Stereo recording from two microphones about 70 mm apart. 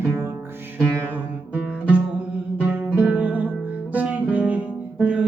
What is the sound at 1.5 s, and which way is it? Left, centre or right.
Music, centre.